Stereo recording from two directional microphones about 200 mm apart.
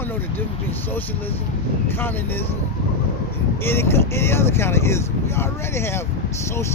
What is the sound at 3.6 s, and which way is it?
Speech, 10° left (ahead or behind).